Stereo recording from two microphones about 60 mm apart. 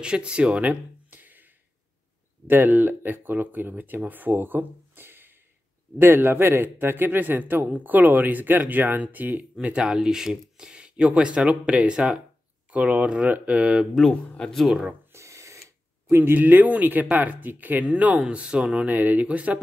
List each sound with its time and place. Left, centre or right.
0.0 s speech: centre
15.1 s a sound: right
16.1 s speech: right; by 18.9 s centre
18.9 s speech: right